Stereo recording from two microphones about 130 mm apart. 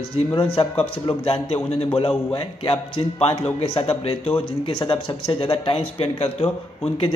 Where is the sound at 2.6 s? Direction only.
45° left (ahead or behind).